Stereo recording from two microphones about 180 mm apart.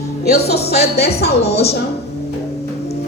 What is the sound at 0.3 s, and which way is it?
A woman's voice, 65° left (ahead or behind).